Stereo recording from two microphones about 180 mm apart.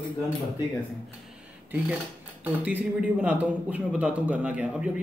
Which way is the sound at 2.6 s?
5° right (ahead or behind).